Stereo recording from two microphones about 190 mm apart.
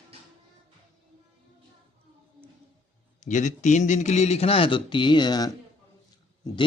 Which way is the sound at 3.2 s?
40° left (ahead or behind).